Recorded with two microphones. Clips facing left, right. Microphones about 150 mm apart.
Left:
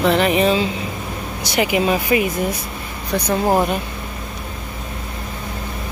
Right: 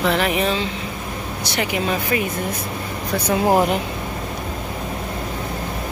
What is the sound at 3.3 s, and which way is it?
Speech, 10° right (ahead or behind).